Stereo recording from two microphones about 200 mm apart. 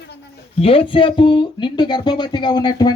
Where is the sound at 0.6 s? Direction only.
25° left (ahead or behind).